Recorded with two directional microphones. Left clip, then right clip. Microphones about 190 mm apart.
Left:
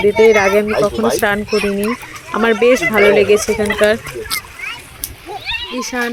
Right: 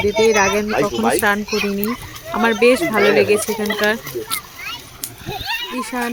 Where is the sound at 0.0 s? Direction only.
10° left (ahead or behind).